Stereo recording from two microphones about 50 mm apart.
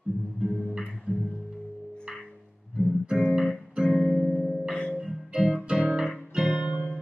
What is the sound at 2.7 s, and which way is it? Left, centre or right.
Music, centre.